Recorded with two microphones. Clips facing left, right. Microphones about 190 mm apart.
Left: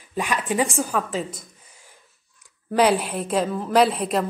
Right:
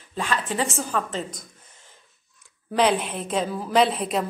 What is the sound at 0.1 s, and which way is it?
A woman's voice, 15° left (ahead or behind).